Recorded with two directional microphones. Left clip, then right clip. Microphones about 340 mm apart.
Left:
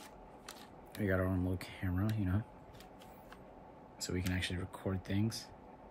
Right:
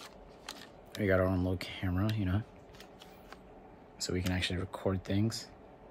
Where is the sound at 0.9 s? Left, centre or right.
Centre.